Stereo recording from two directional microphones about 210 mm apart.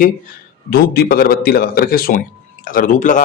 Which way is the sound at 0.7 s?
45° left (ahead or behind).